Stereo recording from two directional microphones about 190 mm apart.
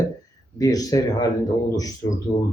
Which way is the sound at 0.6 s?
20° left (ahead or behind).